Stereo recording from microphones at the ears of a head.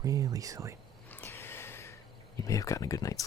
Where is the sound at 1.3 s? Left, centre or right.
Left.